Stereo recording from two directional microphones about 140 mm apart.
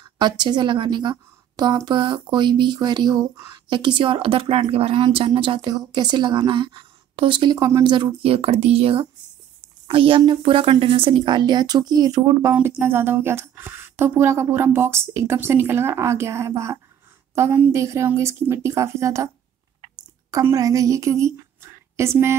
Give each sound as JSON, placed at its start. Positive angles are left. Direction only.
{"t": 0.2, "sound": "speech", "side_deg": -30}
{"t": 12.5, "sound": "a woman's voice", "side_deg": -15}